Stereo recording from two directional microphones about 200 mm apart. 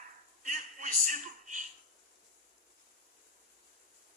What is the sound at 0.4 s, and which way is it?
A man's voice, 40° right (ahead or behind).